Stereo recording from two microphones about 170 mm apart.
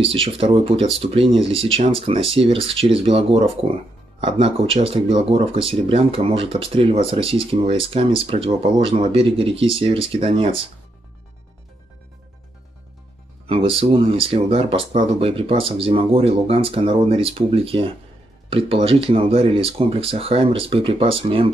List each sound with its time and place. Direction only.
0.0 s speech: 35° right (ahead or behind)
13.5 s speech: 35° right (ahead or behind)